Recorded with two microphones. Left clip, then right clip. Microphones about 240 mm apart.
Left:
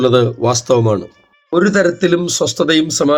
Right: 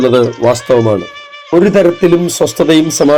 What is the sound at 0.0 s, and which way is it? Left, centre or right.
Speech, centre.